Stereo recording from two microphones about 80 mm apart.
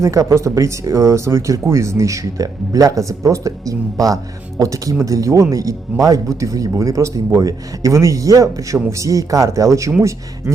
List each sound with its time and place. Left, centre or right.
0.0 s speech: right